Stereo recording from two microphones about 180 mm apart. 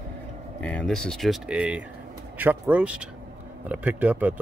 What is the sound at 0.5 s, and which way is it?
Speech, 5° left (ahead or behind).